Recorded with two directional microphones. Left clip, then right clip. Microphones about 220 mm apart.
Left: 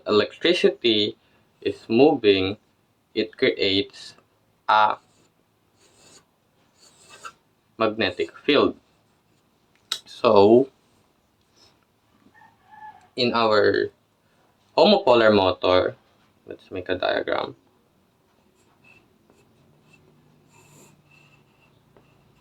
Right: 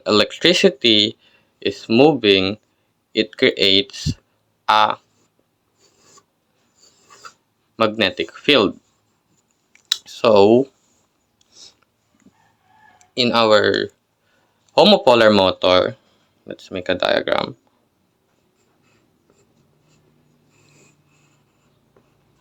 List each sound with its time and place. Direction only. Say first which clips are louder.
0.0 s speech: right 5 dB; 40° right (ahead or behind)
4.6 s a sound: right 3 dB; 40° right (ahead or behind)
7.8 s speech: right 5 dB; 40° right (ahead or behind)
9.9 s clicking: right 4 dB; 30° right (ahead or behind)
13.0 s speech: right 5 dB; 40° right (ahead or behind)